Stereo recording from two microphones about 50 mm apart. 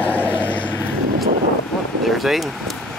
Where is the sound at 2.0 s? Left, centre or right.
Centre.